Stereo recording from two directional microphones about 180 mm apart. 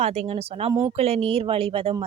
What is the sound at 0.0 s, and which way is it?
Speech, 35° right (ahead or behind).